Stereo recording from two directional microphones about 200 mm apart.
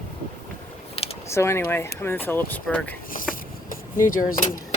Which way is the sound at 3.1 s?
45° left (ahead or behind).